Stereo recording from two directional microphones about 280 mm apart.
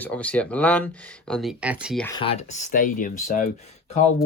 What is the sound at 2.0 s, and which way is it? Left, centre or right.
Speech, centre.